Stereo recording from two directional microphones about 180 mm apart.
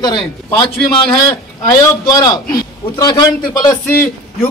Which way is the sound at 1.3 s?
20° left (ahead or behind).